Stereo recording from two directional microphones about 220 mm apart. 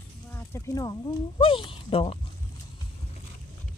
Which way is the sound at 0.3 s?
10° left (ahead or behind).